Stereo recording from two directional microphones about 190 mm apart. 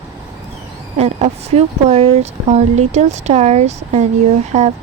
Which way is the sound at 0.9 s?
35° right (ahead or behind).